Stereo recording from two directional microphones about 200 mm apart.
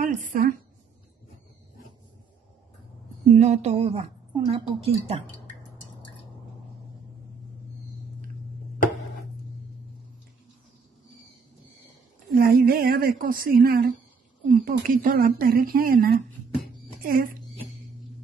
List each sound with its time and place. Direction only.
0.0 s a woman's voice: 40° right (ahead or behind)
3.3 s a woman's voice: 35° right (ahead or behind)
12.4 s a woman's voice: 50° right (ahead or behind)